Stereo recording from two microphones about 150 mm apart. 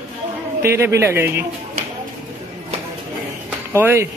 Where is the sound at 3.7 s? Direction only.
15° right (ahead or behind).